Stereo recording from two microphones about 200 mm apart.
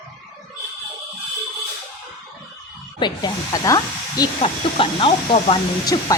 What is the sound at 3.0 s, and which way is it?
Speech, 20° left (ahead or behind).